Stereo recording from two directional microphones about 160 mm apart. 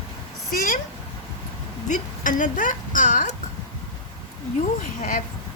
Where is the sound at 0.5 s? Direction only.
60° left (ahead or behind).